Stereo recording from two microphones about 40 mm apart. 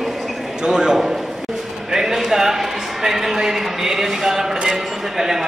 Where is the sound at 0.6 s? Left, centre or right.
Centre.